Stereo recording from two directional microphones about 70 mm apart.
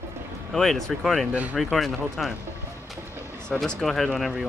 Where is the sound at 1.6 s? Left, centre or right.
Centre.